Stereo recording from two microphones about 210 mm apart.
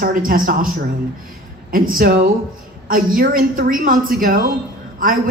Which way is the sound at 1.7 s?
45° right (ahead or behind).